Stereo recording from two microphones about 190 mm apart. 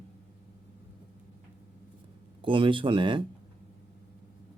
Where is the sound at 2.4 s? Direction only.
25° right (ahead or behind).